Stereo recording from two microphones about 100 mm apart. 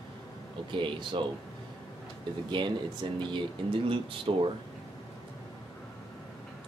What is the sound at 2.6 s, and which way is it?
Speech, 50° right (ahead or behind).